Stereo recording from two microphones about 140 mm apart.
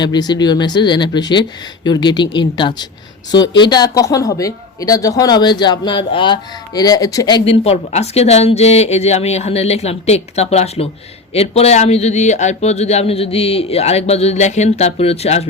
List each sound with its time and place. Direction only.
0.0 s speech: 30° left (ahead or behind)
7.4 s a man's voice: 45° left (ahead or behind)